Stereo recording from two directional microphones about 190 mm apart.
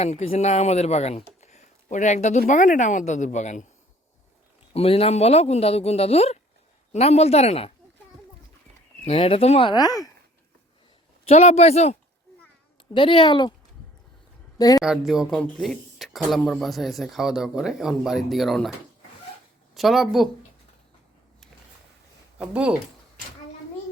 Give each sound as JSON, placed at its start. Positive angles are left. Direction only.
{"t": 0.0, "sound": "speech", "side_deg": 35}
{"t": 4.7, "sound": "speech", "side_deg": 30}
{"t": 9.0, "sound": "speech", "side_deg": 30}
{"t": 11.3, "sound": "speech", "side_deg": 35}
{"t": 14.6, "sound": "speech", "side_deg": 20}
{"t": 14.8, "sound": "speech", "side_deg": 0}
{"t": 19.7, "sound": "speech", "side_deg": 0}
{"t": 22.4, "sound": "speech", "side_deg": -5}